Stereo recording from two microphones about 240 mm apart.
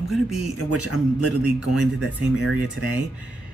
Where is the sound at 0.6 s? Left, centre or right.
Left.